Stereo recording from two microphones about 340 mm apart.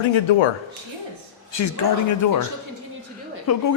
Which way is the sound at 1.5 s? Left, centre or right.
Left.